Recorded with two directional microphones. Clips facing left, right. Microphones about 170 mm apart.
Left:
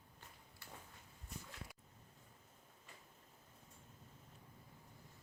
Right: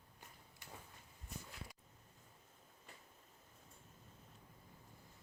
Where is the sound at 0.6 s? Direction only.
15° right (ahead or behind).